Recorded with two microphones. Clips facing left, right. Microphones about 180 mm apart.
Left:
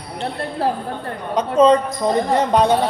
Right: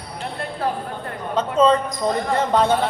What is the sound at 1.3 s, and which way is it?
Speech, 15° left (ahead or behind).